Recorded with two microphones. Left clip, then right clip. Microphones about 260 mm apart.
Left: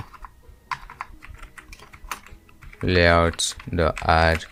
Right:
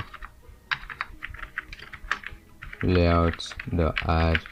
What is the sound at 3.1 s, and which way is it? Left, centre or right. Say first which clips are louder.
Speech: left 6 dB; left.